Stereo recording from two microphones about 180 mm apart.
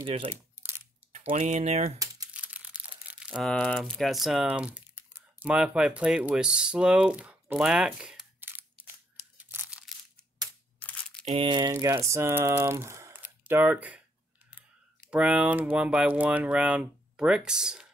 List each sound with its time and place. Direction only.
0.0 s speech: 30° right (ahead or behind)
1.3 s speech: 40° right (ahead or behind)
2.3 s speech: 5° right (ahead or behind)
9.4 s crunch: 10° right (ahead or behind)
10.8 s a sound: 10° left (ahead or behind)
11.2 s speech: 30° right (ahead or behind); by 14.0 s 10° right (ahead or behind)
15.0 s speech: 5° right (ahead or behind)